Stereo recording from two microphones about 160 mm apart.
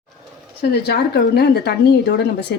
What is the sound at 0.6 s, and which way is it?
Speech, 90° left.